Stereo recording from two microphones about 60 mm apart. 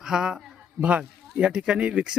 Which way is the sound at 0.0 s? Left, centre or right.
Centre.